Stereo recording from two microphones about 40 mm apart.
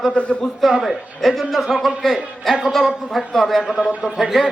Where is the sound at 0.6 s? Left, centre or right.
Centre.